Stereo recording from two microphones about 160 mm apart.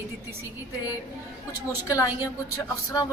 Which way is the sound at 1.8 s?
20° left (ahead or behind).